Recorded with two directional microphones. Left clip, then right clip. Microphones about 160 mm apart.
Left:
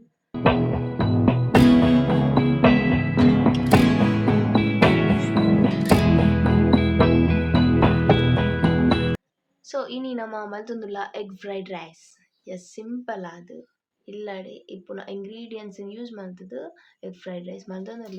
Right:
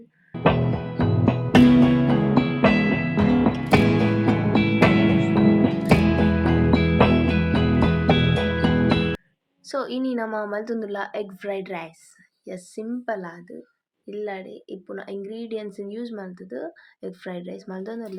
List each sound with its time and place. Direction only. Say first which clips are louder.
0.4 s music: left 1 dB; centre (ahead or behind)
9.6 s a woman's voice: right 2 dB; 30° right (ahead or behind)